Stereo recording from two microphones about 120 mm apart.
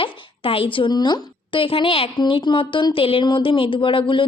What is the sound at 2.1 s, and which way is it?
A woman's voice, 40° left (ahead or behind).